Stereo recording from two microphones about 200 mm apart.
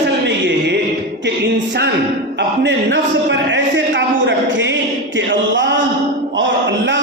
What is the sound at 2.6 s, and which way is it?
Speech, 60° right (ahead or behind).